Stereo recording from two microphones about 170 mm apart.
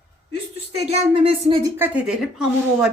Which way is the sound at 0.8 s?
35° right (ahead or behind).